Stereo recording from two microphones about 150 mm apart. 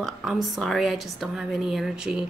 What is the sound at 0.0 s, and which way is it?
A woman's voice, centre (ahead or behind).